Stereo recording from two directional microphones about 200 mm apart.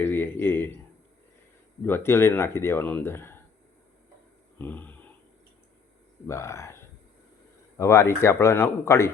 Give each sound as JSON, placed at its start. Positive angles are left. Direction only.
{"t": 0.0, "sound": "speech", "side_deg": 10}
{"t": 1.8, "sound": "speech", "side_deg": 10}
{"t": 4.5, "sound": "a sound", "side_deg": 10}
{"t": 6.2, "sound": "speech", "side_deg": 15}